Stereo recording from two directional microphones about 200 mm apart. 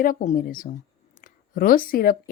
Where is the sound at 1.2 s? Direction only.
45° left (ahead or behind).